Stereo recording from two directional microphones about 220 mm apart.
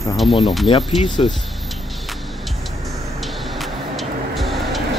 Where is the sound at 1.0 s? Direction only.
20° left (ahead or behind).